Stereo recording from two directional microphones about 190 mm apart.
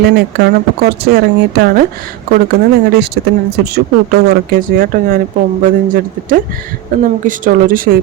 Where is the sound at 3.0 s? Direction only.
60° right (ahead or behind).